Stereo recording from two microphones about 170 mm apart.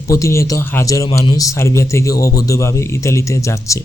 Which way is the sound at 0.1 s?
15° left (ahead or behind).